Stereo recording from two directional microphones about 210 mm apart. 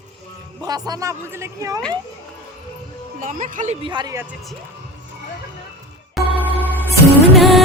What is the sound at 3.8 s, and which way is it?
Speech, 20° right (ahead or behind).